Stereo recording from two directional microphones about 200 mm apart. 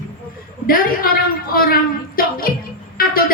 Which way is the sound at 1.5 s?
45° left (ahead or behind).